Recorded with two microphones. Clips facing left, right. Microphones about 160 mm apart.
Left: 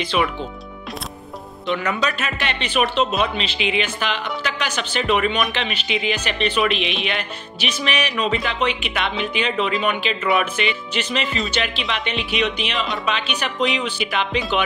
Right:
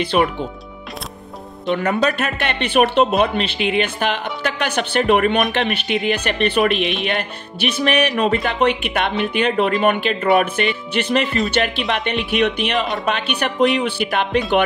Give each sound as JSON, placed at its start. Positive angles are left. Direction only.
{"t": 0.1, "sound": "speech", "side_deg": -45}
{"t": 1.7, "sound": "speech", "side_deg": -50}